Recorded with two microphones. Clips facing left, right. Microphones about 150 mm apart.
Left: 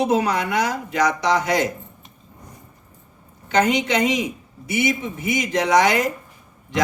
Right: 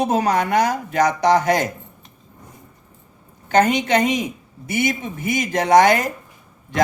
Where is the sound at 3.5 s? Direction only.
50° right (ahead or behind).